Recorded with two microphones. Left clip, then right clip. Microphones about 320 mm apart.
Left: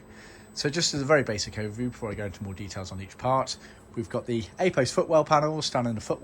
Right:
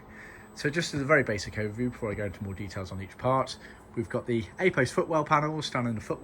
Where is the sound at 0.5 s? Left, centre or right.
Centre.